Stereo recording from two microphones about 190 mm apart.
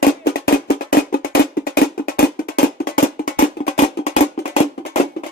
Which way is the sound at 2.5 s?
50° left (ahead or behind).